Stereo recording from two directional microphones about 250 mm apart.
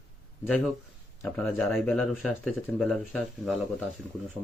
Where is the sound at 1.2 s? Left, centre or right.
Centre.